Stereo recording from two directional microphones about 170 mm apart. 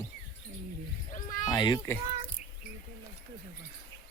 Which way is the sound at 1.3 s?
20° left (ahead or behind).